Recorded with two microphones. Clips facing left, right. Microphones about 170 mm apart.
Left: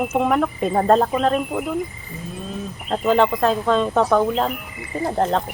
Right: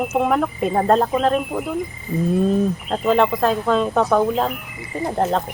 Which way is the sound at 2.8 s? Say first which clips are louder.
Left 3 dB; centre (ahead or behind).